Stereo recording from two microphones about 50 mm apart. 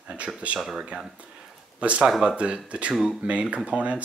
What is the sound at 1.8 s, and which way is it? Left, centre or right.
Speech, right.